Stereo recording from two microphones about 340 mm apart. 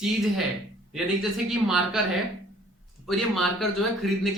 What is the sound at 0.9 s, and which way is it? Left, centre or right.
Speech, centre.